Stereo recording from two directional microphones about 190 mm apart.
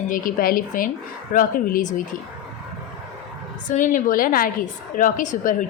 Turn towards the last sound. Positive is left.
turn(degrees=40)  # may be behind; listen again after turning